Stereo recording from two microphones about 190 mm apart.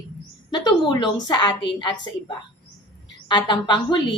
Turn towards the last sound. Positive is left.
turn(degrees=25)  # may be behind; listen again after turning